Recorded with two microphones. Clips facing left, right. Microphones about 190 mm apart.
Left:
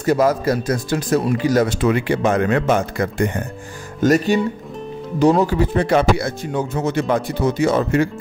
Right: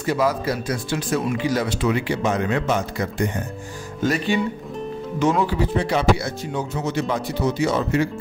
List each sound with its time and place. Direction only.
0.0 s speech: 45° left (ahead or behind)
4.0 s speech: 45° left (ahead or behind)